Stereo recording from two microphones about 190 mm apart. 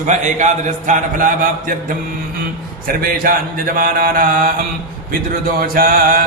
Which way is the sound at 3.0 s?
50° right (ahead or behind).